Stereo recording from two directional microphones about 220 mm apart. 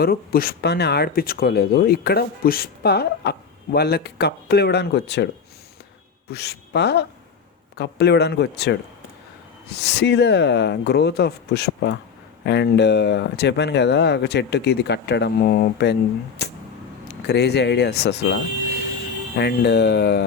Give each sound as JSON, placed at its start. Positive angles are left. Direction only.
{"t": 0.0, "sound": "speech", "side_deg": 45}
{"t": 6.3, "sound": "speech", "side_deg": 50}
{"t": 17.1, "sound": "speech", "side_deg": 50}
{"t": 19.4, "sound": "speech", "side_deg": 50}